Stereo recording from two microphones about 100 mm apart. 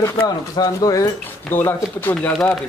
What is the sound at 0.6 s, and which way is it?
Speech, 40° left (ahead or behind).